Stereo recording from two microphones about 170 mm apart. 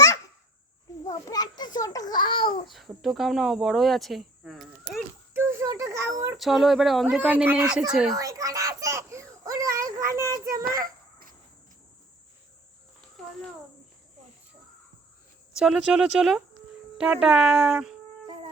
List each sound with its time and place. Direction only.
1.0 s a child's voice: 20° left (ahead or behind)
2.6 s speech: centre (ahead or behind)
5.3 s speech: 15° right (ahead or behind)
6.3 s speech: centre (ahead or behind)
8.1 s a sound: 20° right (ahead or behind)
10.5 s children playing: 55° right (ahead or behind)
15.5 s speech: 5° right (ahead or behind)